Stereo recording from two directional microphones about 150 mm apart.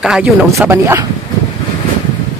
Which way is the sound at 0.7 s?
15° right (ahead or behind).